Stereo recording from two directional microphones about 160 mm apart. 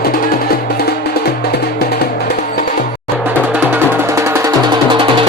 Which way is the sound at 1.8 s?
85° left.